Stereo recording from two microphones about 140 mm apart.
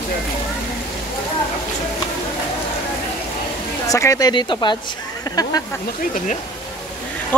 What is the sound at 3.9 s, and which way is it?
Speech, 25° left (ahead or behind).